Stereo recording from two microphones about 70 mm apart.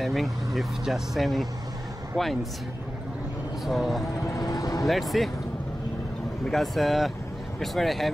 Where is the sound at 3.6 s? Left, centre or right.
Centre.